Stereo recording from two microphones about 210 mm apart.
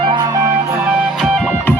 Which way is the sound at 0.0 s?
20° right (ahead or behind).